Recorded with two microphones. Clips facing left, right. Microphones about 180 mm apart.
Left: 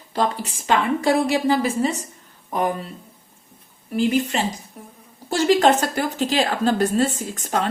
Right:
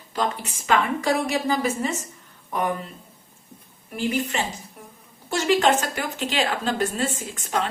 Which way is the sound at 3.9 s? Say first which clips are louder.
Left 5 dB; 35° left (ahead or behind).